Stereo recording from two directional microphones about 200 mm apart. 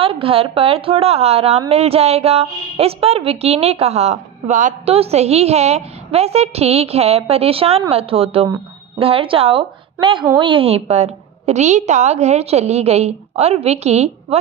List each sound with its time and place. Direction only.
0.0 s a woman's voice: 25° right (ahead or behind)